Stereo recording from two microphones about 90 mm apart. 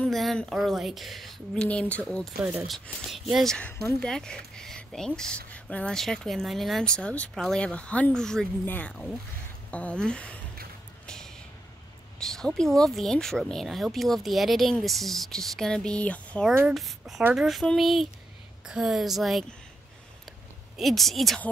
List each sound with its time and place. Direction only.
0.1 s speech: centre (ahead or behind)
2.6 s speech: centre (ahead or behind)
7.0 s speech: 10° left (ahead or behind)
8.6 s speech: 15° left (ahead or behind)
11.1 s a sound: 5° left (ahead or behind)
12.2 s speech: 5° left (ahead or behind)
16.7 s speech: centre (ahead or behind)
20.7 s speech: centre (ahead or behind)